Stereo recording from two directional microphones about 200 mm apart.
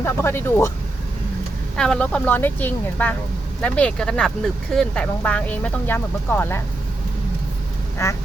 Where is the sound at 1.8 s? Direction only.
5° left (ahead or behind).